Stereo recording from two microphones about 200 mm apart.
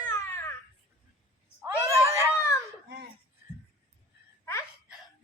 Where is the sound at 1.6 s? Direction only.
15° right (ahead or behind).